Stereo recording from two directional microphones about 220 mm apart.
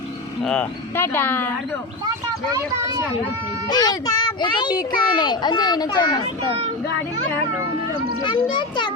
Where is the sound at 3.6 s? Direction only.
20° left (ahead or behind).